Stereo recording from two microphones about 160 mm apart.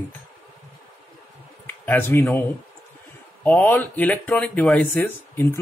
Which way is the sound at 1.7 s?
15° left (ahead or behind).